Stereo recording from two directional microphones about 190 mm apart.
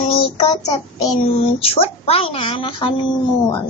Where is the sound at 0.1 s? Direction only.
30° left (ahead or behind).